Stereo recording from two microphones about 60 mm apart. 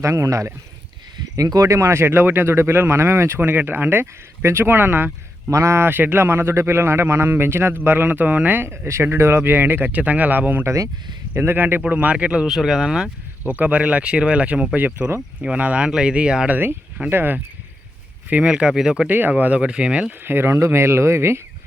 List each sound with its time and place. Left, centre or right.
0.0 s speech: right
1.4 s speech: right
4.0 s speech: right
5.5 s speech: right
5.9 s speech: right; by 12.5 s centre
12.5 s speech: centre
13.4 s speech: right
17.1 s speech: right
18.3 s speech: centre
19.0 s speech: right
20.2 s speech: right